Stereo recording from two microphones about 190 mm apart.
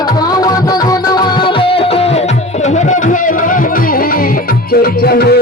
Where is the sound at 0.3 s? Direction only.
20° left (ahead or behind).